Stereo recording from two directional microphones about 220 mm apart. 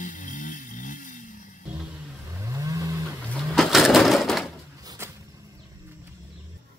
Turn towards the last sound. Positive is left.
turn(degrees=-10)  # may be behind; listen again after turning